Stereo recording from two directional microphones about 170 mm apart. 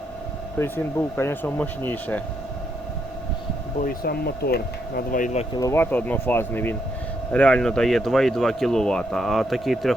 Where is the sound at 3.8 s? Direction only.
65° left (ahead or behind); by 5.4 s 50° left (ahead or behind).